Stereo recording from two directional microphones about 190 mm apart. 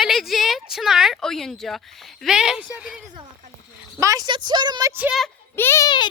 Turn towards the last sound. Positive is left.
turn(degrees=25)  # may be behind; listen again after turning